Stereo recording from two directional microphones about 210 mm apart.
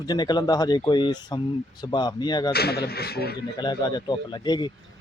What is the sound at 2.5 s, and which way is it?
Speech, 50° left (ahead or behind).